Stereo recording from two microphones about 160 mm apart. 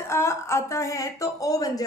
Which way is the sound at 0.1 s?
15° left (ahead or behind).